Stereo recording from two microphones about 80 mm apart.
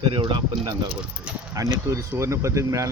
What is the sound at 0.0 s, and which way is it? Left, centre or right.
Speech, right.